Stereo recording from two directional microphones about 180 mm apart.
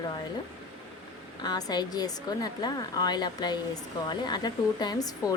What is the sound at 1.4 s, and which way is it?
Speech, 20° left (ahead or behind).